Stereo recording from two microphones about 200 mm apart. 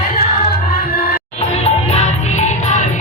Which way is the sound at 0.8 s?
45° left (ahead or behind).